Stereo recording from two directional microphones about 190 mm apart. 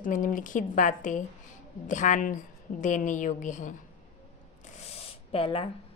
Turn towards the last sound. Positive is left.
turn(degrees=30)  # may be behind; listen again after turning